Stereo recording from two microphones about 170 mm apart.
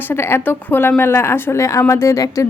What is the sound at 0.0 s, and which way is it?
Speech, 15° left (ahead or behind).